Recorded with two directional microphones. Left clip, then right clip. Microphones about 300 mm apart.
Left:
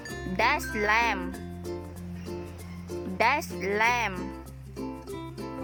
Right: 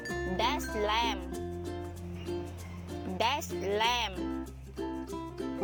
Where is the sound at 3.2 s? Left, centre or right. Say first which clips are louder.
Left 6 dB; left.